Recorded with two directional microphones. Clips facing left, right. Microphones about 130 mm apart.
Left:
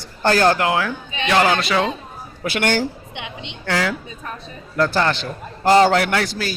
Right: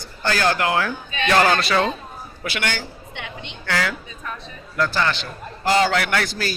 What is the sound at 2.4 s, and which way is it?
Speech, 45° left (ahead or behind).